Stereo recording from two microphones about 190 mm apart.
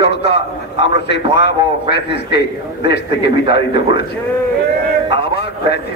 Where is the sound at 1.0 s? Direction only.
65° left (ahead or behind).